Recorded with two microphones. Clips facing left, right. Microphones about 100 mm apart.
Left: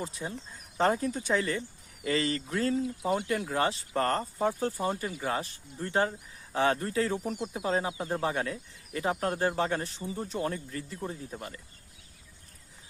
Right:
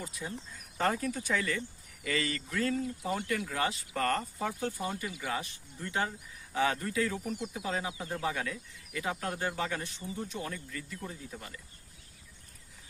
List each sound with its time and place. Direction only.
0.0 s speech: 30° left (ahead or behind)
2.8 s speech: 20° left (ahead or behind)
3.2 s speech: 30° left (ahead or behind)